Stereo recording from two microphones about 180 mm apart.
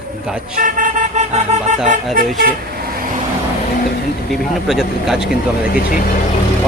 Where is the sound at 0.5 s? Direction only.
50° right (ahead or behind).